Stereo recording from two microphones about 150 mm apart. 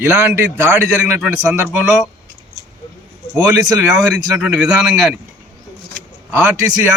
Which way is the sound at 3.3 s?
20° right (ahead or behind).